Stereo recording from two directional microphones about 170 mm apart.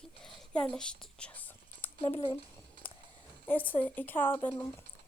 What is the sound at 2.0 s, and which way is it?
Speech, 30° left (ahead or behind).